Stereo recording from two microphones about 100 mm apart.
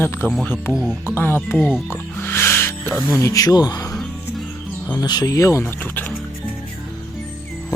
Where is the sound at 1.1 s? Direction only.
20° left (ahead or behind).